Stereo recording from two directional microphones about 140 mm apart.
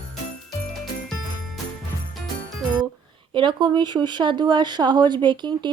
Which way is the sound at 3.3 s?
35° right (ahead or behind).